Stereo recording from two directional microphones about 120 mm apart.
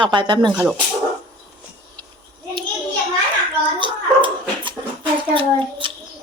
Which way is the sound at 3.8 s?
45° right (ahead or behind).